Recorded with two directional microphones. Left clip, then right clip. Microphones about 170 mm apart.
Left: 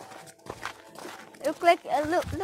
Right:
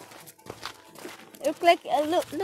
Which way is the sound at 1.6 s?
30° right (ahead or behind).